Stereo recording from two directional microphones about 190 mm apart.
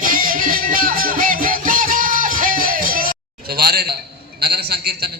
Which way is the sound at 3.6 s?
55° right (ahead or behind).